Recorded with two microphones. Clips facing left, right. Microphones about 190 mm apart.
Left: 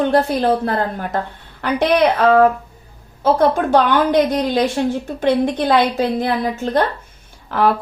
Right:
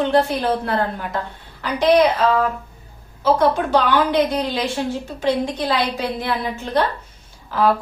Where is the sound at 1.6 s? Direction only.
60° left (ahead or behind).